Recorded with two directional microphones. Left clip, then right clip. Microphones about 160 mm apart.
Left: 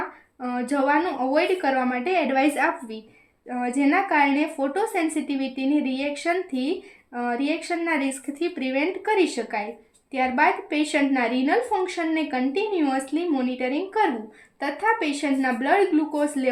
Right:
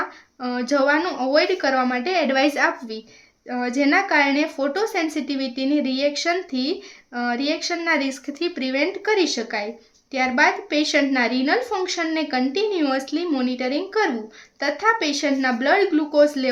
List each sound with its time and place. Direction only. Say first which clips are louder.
0.4 s speech: right 3 dB; 35° right (ahead or behind)